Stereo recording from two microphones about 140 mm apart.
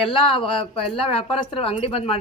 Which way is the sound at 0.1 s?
40° left (ahead or behind).